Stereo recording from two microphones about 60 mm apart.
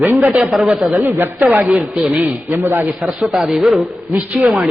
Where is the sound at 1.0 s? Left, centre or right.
Right.